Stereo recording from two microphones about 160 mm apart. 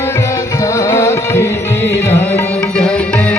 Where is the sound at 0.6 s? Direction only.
20° left (ahead or behind).